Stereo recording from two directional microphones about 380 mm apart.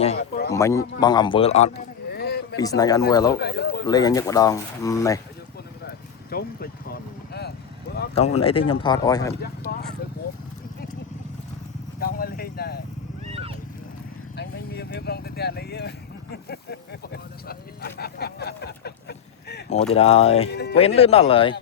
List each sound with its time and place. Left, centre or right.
0.0 s a sound: left
0.5 s speech: centre; by 2.6 s left
2.6 s speech: centre
3.3 s speech: left
3.8 s speech: centre
6.3 s speech: left
9.7 s a sound: left
11.9 s vehicle: left
13.3 s horse: centre
14.3 s speech: left